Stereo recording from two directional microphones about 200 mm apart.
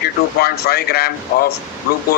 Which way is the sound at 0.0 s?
50° left (ahead or behind).